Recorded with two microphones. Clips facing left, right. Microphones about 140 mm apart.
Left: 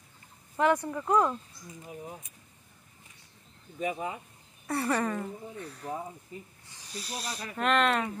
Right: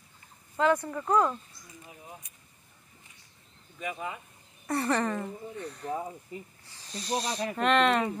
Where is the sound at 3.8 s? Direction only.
30° left (ahead or behind).